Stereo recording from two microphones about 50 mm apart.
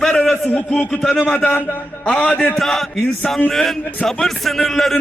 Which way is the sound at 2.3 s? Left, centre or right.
Left.